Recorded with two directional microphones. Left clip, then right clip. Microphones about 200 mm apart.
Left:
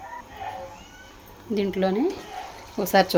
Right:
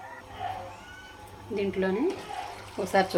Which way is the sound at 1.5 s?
60° left (ahead or behind).